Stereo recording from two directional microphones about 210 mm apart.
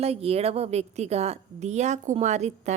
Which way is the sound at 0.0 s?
30° right (ahead or behind).